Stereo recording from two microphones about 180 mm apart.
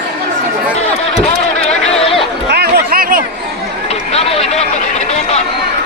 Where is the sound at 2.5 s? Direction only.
55° right (ahead or behind).